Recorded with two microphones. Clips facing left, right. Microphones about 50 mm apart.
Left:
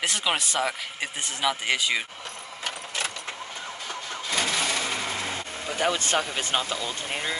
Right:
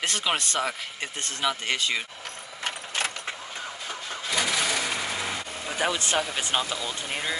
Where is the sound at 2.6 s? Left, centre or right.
Right.